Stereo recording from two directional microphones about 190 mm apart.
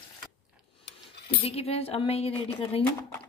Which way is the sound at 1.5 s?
30° left (ahead or behind).